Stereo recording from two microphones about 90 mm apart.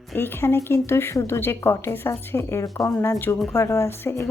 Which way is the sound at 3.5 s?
30° left (ahead or behind).